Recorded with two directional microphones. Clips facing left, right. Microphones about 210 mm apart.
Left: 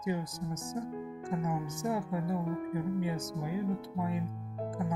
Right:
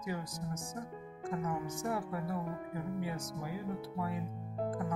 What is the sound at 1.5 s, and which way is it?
Speech, 20° left (ahead or behind).